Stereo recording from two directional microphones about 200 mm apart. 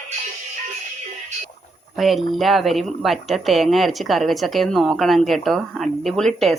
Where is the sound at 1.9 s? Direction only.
Centre (ahead or behind).